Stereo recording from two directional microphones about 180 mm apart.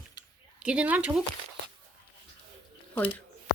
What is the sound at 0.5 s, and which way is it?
Speech, 5° right (ahead or behind).